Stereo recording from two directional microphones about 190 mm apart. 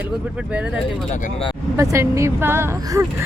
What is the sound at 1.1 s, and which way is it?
Speech, 40° left (ahead or behind).